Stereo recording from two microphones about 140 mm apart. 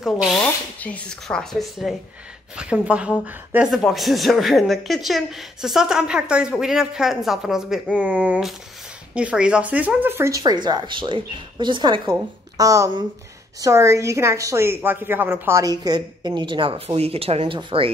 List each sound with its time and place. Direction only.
0.0 s speech: centre (ahead or behind)
0.7 s a woman's voice: 10° left (ahead or behind); by 17.9 s 40° right (ahead or behind)